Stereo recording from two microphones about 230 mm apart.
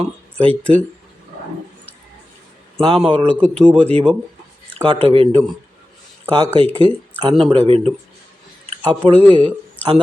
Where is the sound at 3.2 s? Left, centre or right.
Centre.